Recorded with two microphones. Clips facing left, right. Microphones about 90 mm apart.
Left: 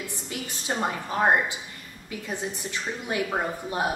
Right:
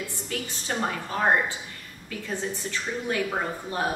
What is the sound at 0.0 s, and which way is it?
A woman's voice, 15° left (ahead or behind).